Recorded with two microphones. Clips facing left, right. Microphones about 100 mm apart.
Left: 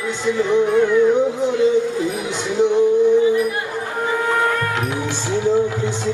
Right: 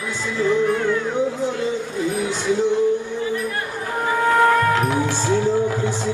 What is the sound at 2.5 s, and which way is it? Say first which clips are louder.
Music: left 3 dB; 20° left (ahead or behind).